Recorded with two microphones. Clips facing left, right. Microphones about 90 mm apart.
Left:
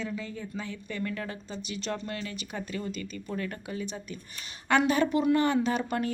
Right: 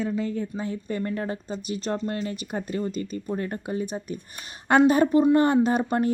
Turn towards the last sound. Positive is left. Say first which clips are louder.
# right 6 dB
turn(degrees=-40)  # may be behind; listen again after turning